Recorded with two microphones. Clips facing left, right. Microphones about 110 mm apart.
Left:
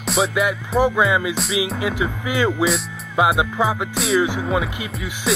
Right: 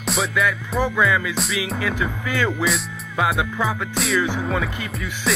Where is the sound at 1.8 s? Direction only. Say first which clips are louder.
Left 2 dB; 20° left (ahead or behind).